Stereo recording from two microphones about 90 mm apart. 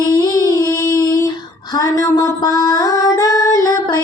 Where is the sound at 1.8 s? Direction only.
40° left (ahead or behind).